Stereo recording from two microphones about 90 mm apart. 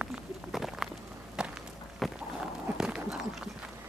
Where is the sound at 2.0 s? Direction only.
Centre (ahead or behind).